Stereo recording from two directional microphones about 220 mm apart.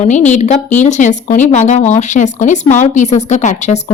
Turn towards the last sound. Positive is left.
turn(degrees=30)  # may be behind; listen again after turning